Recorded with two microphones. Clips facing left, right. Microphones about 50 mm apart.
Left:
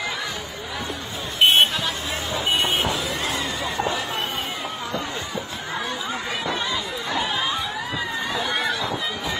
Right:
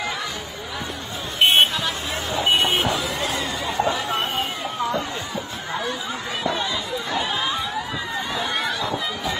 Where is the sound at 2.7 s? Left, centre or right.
Right.